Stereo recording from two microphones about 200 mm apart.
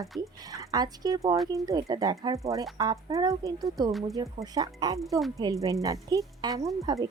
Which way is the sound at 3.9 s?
Centre (ahead or behind).